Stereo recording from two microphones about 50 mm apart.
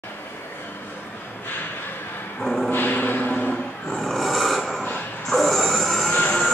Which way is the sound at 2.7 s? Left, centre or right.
Left.